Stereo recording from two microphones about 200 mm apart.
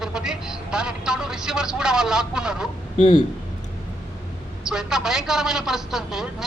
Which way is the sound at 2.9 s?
30° left (ahead or behind).